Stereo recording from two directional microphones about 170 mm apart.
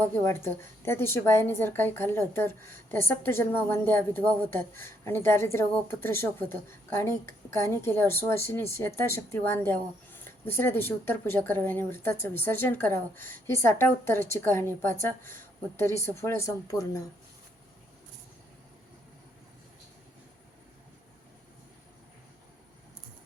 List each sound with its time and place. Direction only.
0.0 s a woman's voice: 15° left (ahead or behind)